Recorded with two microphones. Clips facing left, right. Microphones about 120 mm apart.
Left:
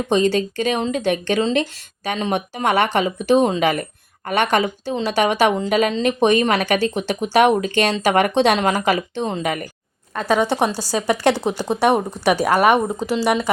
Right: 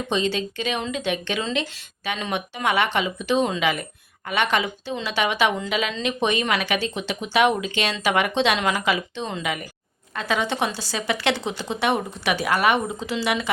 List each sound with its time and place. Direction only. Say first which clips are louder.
0.1 s a woman's voice: left 7 dB; 45° left (ahead or behind)